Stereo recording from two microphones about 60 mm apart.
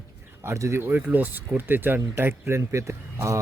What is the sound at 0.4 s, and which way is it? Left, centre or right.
Speech, right.